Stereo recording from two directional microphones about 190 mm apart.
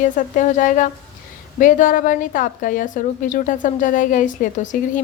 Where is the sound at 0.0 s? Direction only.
40° left (ahead or behind).